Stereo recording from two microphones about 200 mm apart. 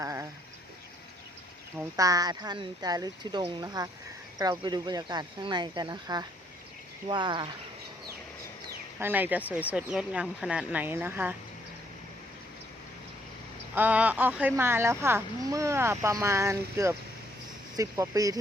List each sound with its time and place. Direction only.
0.0 s a sound: 15° right (ahead or behind)
2.0 s speech: 20° right (ahead or behind)
9.0 s speech: 10° right (ahead or behind)
13.7 s speech: 10° right (ahead or behind)